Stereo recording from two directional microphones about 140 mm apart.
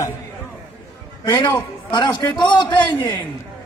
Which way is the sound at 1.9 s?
30° left (ahead or behind).